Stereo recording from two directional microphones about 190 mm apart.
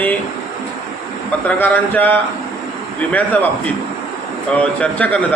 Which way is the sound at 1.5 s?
10° left (ahead or behind).